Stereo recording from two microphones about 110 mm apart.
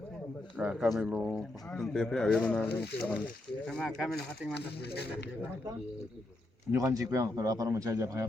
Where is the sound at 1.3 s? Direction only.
5° left (ahead or behind).